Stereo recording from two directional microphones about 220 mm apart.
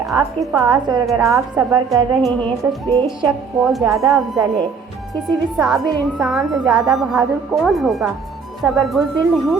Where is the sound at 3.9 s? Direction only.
15° right (ahead or behind).